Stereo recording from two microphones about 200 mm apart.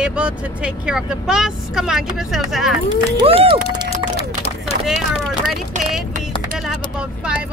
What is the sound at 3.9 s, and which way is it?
Run, 30° left (ahead or behind).